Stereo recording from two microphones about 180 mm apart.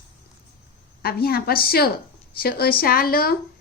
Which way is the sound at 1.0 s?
55° left (ahead or behind).